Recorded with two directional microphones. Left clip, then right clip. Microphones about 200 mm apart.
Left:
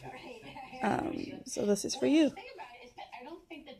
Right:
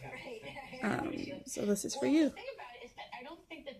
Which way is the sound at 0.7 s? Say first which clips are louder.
Left 4 dB; 10° left (ahead or behind).